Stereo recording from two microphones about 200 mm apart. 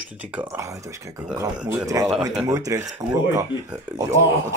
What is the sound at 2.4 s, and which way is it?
Speech, 15° right (ahead or behind).